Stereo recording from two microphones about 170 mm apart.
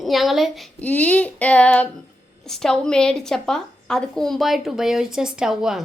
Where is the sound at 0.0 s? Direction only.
Centre (ahead or behind).